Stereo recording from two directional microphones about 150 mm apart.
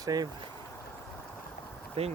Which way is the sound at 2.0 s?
45° right (ahead or behind).